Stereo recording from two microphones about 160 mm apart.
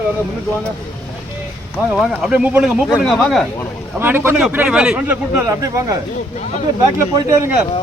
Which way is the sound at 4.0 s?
15° right (ahead or behind).